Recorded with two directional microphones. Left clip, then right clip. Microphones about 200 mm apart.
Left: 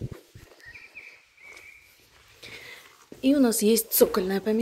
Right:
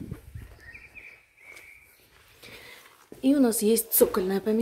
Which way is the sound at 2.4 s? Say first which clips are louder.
Left 3 dB; 10° right (ahead or behind).